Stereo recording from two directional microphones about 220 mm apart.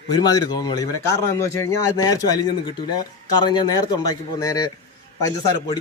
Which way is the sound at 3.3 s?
20° left (ahead or behind).